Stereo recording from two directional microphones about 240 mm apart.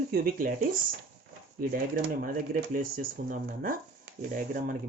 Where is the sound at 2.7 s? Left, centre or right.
Right.